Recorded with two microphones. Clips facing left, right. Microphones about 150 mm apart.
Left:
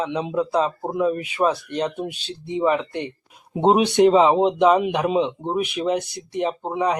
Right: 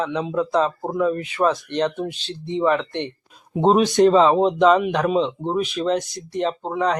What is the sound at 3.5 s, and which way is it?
Speech, 20° left (ahead or behind).